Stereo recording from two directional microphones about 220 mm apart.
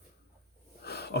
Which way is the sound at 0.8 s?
45° left (ahead or behind).